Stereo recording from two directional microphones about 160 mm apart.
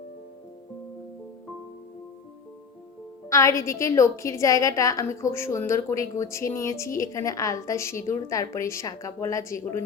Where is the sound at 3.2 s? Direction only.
20° left (ahead or behind).